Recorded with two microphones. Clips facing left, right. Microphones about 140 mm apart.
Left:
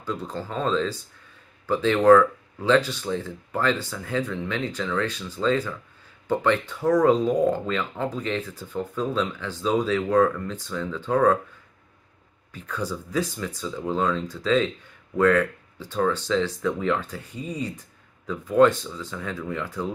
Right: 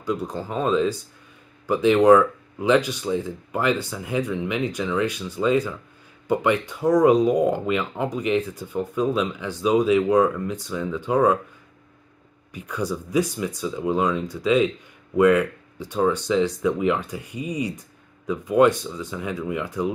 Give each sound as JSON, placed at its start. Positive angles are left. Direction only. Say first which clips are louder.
{"t": 0.0, "sound": "speech", "louder": "right 4 dB", "side_deg": -15}
{"t": 12.5, "sound": "speech", "louder": "right 3 dB", "side_deg": -15}